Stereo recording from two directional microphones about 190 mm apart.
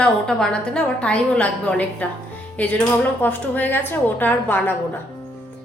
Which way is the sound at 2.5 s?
10° left (ahead or behind).